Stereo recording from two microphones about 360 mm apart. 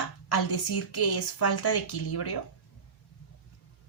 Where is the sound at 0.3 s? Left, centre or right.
Left.